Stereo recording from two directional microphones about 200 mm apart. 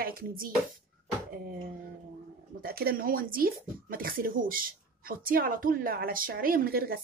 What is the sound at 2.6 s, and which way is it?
Speech, 50° right (ahead or behind).